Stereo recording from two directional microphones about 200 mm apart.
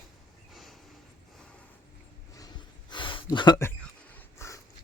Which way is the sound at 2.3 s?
20° left (ahead or behind).